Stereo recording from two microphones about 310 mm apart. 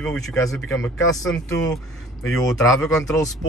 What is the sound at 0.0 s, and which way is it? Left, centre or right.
Speech, centre.